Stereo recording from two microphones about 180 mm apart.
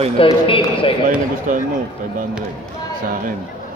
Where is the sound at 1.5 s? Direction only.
45° right (ahead or behind).